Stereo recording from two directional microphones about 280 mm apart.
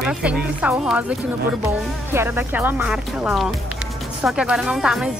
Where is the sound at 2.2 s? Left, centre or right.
Centre.